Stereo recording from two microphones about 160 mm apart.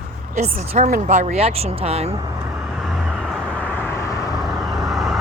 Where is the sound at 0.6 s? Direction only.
45° right (ahead or behind).